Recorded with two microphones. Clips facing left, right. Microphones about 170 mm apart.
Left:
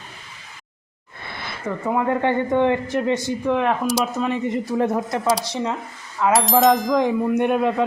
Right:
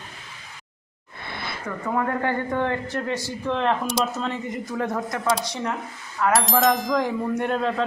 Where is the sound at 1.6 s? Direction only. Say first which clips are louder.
Left 4 dB; 20° left (ahead or behind).